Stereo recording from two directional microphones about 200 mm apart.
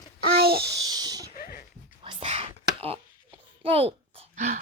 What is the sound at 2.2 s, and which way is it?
Whispering, 35° right (ahead or behind).